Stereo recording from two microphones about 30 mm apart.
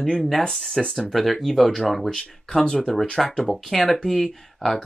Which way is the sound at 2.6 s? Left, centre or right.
Left.